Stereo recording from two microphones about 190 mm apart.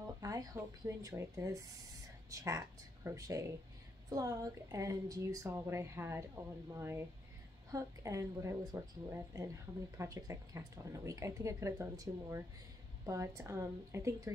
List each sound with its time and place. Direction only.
0.2 s a woman's voice: 20° right (ahead or behind)